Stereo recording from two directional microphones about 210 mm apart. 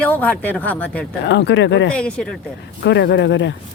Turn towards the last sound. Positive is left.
turn(degrees=60)  # may be behind; listen again after turning